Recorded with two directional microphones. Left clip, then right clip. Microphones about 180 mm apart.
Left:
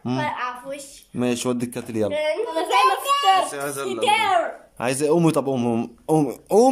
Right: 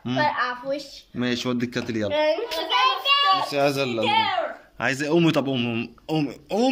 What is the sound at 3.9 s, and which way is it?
Speech, 55° left (ahead or behind).